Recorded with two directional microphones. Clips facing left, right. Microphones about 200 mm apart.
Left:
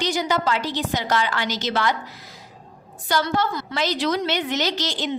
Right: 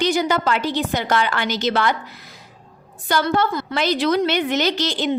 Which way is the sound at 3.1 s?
55° right (ahead or behind).